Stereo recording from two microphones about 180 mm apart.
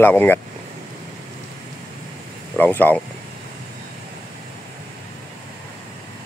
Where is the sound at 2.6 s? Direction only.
10° left (ahead or behind).